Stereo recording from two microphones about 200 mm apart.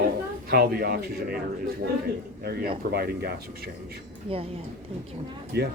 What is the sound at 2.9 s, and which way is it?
Speech, 50° right (ahead or behind).